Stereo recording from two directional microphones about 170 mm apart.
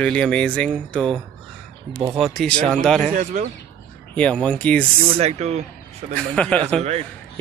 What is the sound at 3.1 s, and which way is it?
Speech, 45° right (ahead or behind).